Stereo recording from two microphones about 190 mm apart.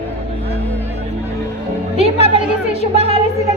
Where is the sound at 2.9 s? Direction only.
30° right (ahead or behind).